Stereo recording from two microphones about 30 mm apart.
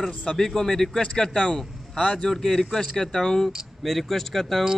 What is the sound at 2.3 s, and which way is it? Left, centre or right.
Speech, centre.